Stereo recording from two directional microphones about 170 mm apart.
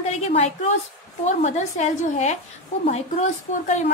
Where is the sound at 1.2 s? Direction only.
45° left (ahead or behind).